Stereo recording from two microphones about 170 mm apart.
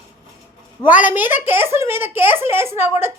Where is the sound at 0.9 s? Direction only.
10° right (ahead or behind).